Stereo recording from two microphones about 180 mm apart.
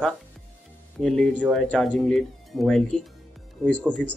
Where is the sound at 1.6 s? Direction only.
5° left (ahead or behind).